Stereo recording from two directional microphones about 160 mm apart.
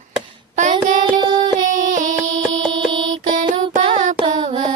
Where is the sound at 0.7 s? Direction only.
30° right (ahead or behind).